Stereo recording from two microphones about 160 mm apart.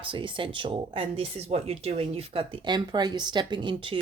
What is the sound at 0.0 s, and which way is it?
A woman's voice, 30° right (ahead or behind).